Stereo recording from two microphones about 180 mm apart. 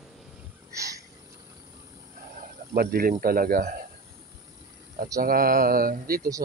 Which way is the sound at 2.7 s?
55° right (ahead or behind).